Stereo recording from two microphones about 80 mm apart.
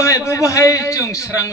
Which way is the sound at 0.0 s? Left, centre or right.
Left.